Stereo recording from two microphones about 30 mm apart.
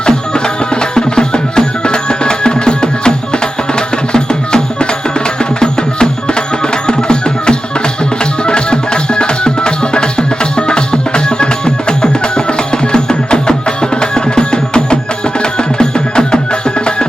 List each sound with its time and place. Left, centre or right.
0.3 s music: left